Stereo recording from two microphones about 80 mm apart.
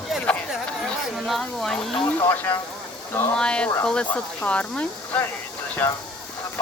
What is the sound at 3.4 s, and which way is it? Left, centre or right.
Speech, centre.